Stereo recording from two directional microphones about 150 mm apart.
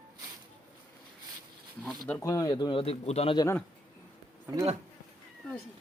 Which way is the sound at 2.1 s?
20° left (ahead or behind).